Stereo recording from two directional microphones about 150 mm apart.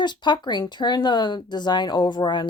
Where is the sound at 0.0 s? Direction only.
30° left (ahead or behind).